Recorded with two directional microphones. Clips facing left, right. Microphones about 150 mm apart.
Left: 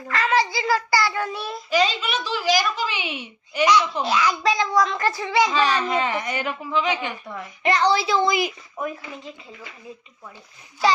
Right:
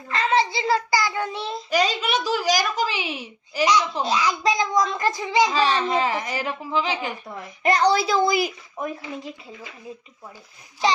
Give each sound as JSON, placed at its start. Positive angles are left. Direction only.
{"t": 0.1, "sound": "child singing", "side_deg": -25}
{"t": 1.7, "sound": "a child's voice", "side_deg": -45}
{"t": 3.9, "sound": "speech", "side_deg": -20}
{"t": 5.5, "sound": "a child's voice", "side_deg": -30}